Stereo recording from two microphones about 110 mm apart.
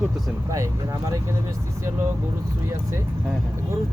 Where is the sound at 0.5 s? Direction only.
30° right (ahead or behind).